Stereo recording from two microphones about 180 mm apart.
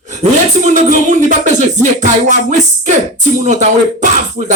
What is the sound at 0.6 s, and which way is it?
Speech, 40° right (ahead or behind).